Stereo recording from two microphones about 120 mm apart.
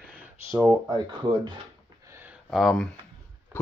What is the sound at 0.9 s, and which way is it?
Speech, 40° right (ahead or behind).